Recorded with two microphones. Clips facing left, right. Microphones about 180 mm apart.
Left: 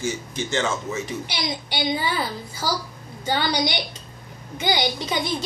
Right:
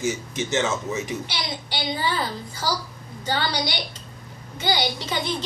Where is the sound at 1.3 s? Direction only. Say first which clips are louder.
Left 2 dB; 15° left (ahead or behind).